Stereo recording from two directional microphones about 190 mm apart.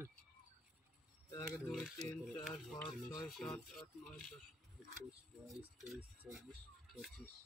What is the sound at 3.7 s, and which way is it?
Speech, centre (ahead or behind).